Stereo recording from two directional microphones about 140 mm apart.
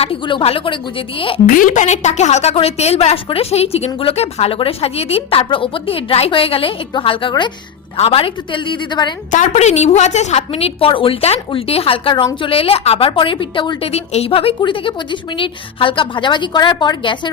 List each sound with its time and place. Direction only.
0.0 s a woman's voice: 40° left (ahead or behind)
1.5 s a woman's voice: 70° left (ahead or behind); by 9.1 s 35° left (ahead or behind)
9.3 s a woman's voice: 60° left (ahead or behind); by 17.3 s 35° left (ahead or behind)